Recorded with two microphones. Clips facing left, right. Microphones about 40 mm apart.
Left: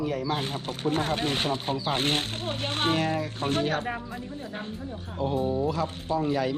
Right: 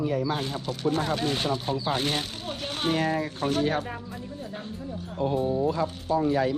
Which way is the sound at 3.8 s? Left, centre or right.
Left.